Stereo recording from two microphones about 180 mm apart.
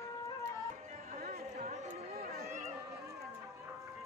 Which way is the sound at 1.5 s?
45° right (ahead or behind).